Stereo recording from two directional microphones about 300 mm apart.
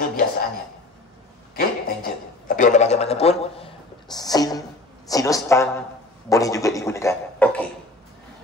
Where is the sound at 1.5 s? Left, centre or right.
Left; by 7.7 s centre.